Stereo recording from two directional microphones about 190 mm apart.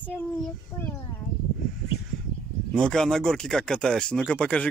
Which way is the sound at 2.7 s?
5° left (ahead or behind).